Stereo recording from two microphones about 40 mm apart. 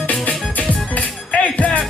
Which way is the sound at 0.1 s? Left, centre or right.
Left.